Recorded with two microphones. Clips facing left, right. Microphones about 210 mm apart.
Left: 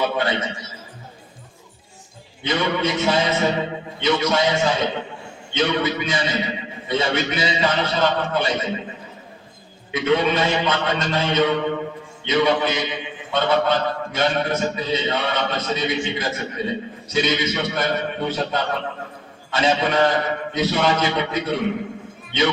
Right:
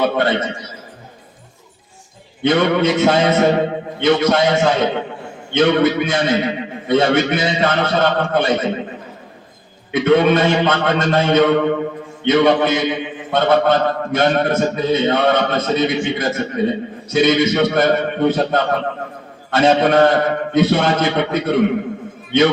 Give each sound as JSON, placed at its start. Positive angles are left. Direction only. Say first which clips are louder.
{"t": 0.0, "sound": "a sound", "louder": "right 5 dB", "side_deg": -55}
{"t": 2.4, "sound": "a man's voice", "louder": "right 7 dB", "side_deg": -55}
{"t": 9.9, "sound": "a man's voice", "louder": "right 6 dB", "side_deg": -55}